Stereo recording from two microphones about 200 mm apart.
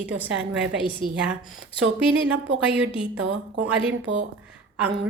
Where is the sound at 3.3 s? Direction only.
70° right (ahead or behind).